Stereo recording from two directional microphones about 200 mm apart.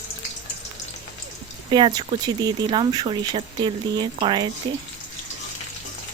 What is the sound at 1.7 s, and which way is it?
Speech, 25° right (ahead or behind).